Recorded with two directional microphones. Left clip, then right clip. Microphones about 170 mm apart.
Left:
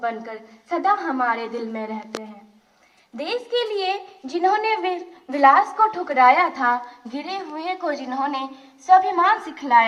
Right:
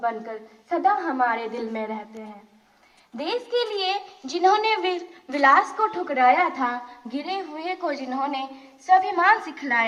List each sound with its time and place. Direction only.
0.0 s a woman's voice: 55° left (ahead or behind)
3.2 s a woman's voice: 50° left (ahead or behind); by 6.7 s 25° left (ahead or behind)
7.8 s a woman's voice: 75° left (ahead or behind)